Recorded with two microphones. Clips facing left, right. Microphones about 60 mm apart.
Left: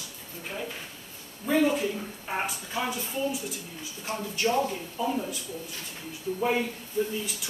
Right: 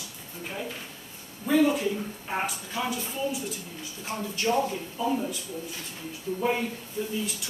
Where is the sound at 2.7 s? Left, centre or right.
Left.